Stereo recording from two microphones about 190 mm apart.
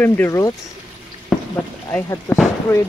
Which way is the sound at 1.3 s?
Centre (ahead or behind).